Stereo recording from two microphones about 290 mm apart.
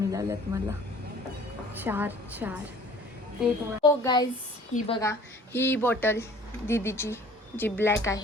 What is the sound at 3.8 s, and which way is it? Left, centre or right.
A woman's voice, centre.